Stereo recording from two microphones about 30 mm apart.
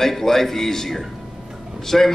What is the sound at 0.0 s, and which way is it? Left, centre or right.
A man's voice, centre.